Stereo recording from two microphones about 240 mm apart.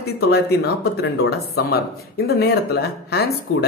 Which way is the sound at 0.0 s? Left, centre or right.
Left.